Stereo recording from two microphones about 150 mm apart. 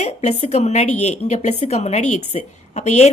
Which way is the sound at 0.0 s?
50° left (ahead or behind).